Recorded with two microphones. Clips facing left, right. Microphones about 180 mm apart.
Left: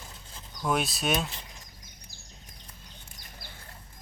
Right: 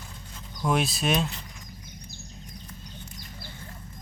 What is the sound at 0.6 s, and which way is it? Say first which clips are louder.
Speech: right 3 dB; centre (ahead or behind).